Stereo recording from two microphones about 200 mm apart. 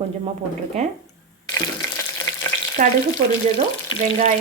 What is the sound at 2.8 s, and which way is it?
Speech, 40° right (ahead or behind).